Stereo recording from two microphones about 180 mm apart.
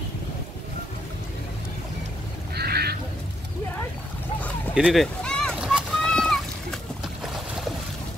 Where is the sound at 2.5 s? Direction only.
60° right (ahead or behind).